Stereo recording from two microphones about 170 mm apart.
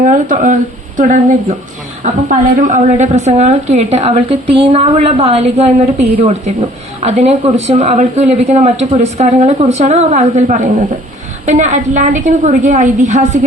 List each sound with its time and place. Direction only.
0.0 s a woman's voice: 50° right (ahead or behind)
2.3 s a woman's voice: 50° right (ahead or behind)